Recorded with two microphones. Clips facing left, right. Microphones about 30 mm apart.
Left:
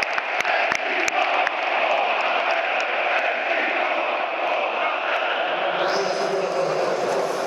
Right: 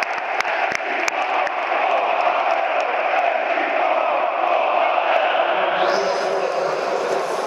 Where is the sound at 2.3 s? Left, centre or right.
Left.